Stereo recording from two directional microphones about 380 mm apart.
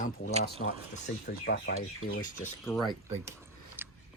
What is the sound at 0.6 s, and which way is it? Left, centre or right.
Speech, left.